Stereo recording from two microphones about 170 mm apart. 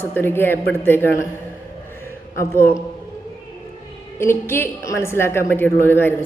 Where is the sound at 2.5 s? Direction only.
15° left (ahead or behind).